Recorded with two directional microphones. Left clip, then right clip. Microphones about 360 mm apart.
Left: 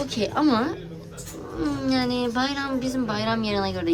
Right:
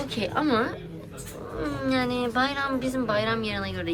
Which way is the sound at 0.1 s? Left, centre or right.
Centre.